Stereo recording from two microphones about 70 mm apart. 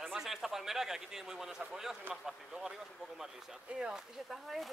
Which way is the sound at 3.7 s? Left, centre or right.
Centre.